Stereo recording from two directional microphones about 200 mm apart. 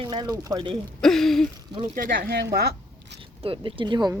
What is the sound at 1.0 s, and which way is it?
Speech, centre (ahead or behind).